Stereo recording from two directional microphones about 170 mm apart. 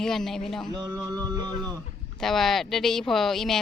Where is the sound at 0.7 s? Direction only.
25° right (ahead or behind).